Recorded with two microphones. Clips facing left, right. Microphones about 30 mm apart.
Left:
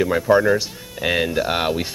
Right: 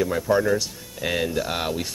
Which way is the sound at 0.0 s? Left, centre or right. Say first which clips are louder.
Left 5 dB; left.